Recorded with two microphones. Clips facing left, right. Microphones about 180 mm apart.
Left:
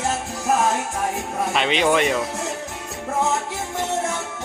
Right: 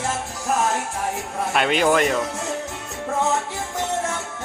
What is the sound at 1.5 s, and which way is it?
Speech, 5° right (ahead or behind).